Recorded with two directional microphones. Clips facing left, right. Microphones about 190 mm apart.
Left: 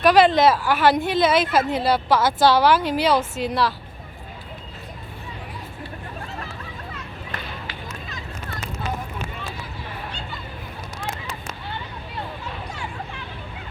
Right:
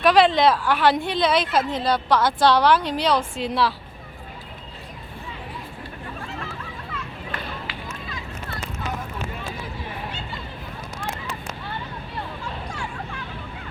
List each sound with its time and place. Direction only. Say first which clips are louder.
0.0 s a woman's voice: left 1 dB; centre (ahead or behind)
6.9 s run: right 2 dB; 45° left (ahead or behind)